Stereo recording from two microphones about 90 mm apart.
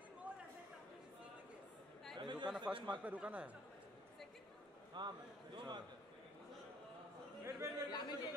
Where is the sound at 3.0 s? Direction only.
15° right (ahead or behind).